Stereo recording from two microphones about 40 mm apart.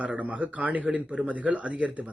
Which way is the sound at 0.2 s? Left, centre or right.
Right.